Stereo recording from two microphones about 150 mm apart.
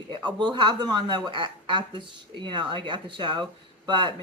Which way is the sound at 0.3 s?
30° right (ahead or behind).